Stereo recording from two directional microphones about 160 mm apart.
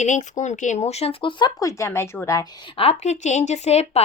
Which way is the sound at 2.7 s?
40° left (ahead or behind).